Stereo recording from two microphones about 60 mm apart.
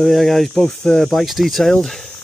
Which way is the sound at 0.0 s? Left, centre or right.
Centre.